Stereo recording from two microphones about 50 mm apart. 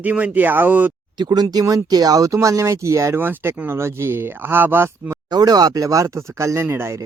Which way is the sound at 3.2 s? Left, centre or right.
Right.